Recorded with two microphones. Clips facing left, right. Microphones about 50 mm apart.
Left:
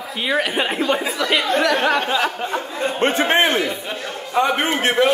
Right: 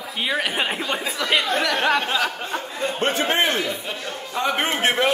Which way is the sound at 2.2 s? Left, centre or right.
Centre.